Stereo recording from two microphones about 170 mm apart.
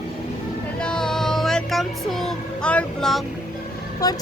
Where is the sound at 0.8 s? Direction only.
5° left (ahead or behind).